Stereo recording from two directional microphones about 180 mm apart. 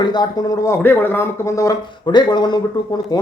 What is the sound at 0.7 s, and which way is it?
Speech, 10° left (ahead or behind).